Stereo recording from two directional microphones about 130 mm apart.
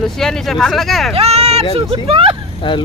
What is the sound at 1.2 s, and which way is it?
Speech, 55° right (ahead or behind).